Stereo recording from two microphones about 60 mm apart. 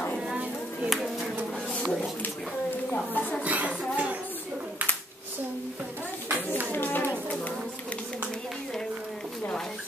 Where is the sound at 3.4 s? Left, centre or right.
Right.